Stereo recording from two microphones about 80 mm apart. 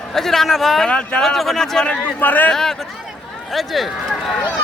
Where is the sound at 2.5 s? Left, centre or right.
Centre.